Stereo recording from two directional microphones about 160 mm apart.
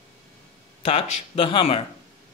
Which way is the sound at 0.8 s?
35° left (ahead or behind).